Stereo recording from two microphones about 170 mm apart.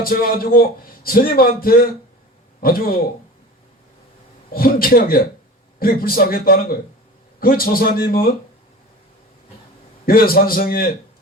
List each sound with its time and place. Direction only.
0.0 s a man's voice: 60° left (ahead or behind)
4.5 s a man's voice: 60° left (ahead or behind)
10.1 s a man's voice: 60° left (ahead or behind)